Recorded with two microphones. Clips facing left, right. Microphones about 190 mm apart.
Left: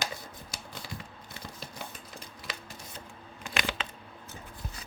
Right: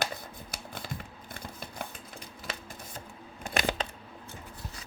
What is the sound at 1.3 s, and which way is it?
Scissors, 55° right (ahead or behind).